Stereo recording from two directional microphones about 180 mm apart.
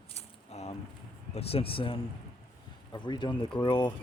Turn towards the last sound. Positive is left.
turn(degrees=25)  # may be behind; listen again after turning